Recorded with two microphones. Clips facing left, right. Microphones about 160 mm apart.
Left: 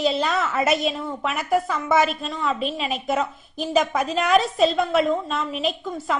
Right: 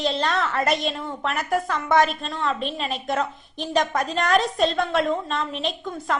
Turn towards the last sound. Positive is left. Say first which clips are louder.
# left 1 dB
turn(degrees=5)  # may be behind; listen again after turning